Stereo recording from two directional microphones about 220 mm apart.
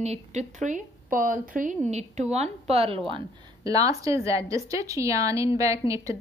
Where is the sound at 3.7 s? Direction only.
15° right (ahead or behind).